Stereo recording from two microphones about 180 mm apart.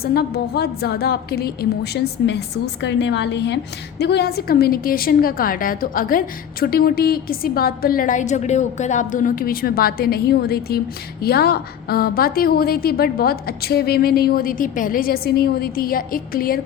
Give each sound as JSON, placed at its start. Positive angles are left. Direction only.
{"t": 0.0, "sound": "a woman's voice", "side_deg": 60}